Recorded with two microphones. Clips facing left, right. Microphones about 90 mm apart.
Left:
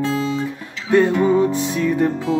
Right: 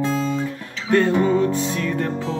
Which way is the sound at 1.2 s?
15° left (ahead or behind).